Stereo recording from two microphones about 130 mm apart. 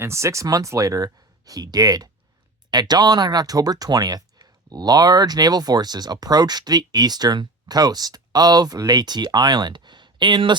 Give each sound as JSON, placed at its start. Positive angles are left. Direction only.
{"t": 0.0, "sound": "speech", "side_deg": -20}